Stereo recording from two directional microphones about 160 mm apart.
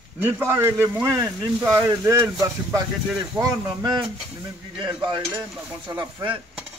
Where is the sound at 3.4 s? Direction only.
20° right (ahead or behind).